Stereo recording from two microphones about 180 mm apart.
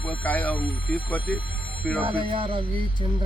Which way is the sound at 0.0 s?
10° left (ahead or behind).